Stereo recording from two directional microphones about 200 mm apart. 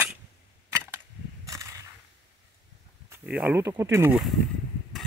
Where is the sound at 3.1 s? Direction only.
5° right (ahead or behind).